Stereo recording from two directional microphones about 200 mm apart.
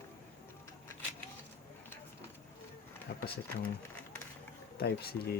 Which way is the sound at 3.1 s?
60° left (ahead or behind).